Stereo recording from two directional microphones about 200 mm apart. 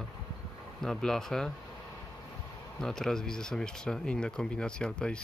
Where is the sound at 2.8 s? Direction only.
5° left (ahead or behind).